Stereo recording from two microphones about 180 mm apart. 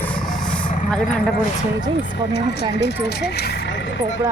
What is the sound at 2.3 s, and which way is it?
Speech, 70° left (ahead or behind).